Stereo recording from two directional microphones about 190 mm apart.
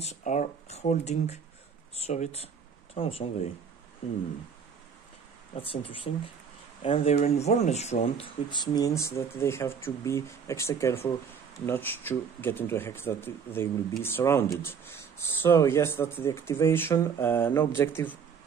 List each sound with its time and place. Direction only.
0.0 s speech: 40° left (ahead or behind)
5.5 s speech: 30° left (ahead or behind); by 18.1 s 10° left (ahead or behind)